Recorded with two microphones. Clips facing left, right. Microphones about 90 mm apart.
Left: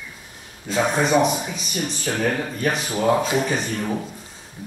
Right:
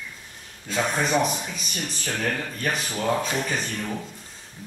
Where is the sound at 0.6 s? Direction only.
5° left (ahead or behind).